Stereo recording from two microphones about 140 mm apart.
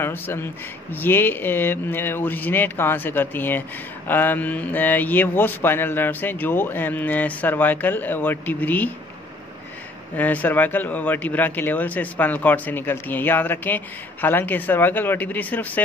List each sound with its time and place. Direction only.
0.0 s speech: 15° left (ahead or behind)
10.1 s speech: 10° left (ahead or behind)